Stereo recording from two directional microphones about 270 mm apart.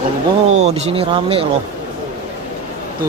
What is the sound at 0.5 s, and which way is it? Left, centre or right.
Speech, right.